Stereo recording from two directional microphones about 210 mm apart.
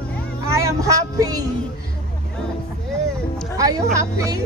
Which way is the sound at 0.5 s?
15° right (ahead or behind).